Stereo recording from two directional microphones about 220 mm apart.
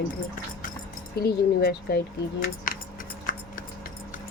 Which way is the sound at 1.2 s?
45° left (ahead or behind).